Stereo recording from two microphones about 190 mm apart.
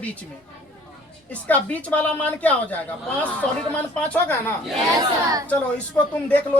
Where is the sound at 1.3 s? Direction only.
5° left (ahead or behind).